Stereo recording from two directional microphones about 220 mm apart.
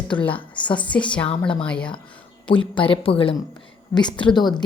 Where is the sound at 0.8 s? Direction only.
5° left (ahead or behind).